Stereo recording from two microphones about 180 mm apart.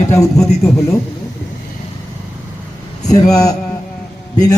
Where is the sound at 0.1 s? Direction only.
15° left (ahead or behind).